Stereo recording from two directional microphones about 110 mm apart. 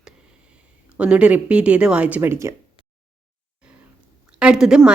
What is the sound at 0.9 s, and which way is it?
A woman's voice, 10° right (ahead or behind).